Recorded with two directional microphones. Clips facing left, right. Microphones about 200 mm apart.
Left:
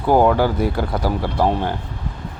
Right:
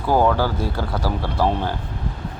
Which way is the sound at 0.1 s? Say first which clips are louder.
Left 3 dB; 15° left (ahead or behind).